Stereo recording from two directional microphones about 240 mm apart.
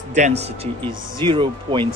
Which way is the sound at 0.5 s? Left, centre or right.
Right.